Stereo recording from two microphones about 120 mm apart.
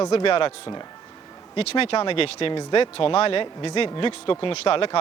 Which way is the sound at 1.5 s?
55° left (ahead or behind).